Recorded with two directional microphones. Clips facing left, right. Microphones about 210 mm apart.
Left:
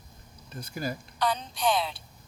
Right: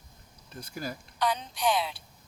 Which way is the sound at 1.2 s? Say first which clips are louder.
Even; 15° right (ahead or behind).